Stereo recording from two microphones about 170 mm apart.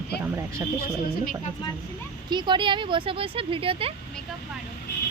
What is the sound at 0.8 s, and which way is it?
Speech, 65° left (ahead or behind).